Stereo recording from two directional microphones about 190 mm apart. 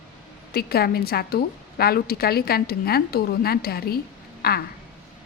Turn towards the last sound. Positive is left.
turn(degrees=55)  # may be behind; listen again after turning